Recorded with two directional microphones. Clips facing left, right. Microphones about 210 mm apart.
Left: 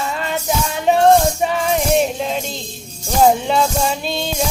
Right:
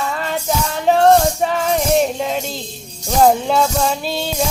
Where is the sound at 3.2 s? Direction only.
Centre (ahead or behind).